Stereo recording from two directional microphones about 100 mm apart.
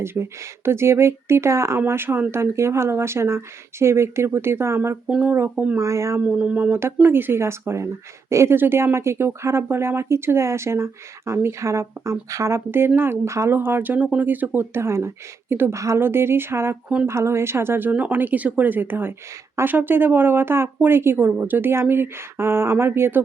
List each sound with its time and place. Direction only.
0.0 s speech: 25° right (ahead or behind)
6.2 s speech: 15° right (ahead or behind)